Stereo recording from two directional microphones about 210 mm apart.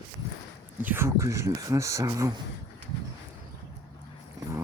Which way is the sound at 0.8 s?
10° right (ahead or behind).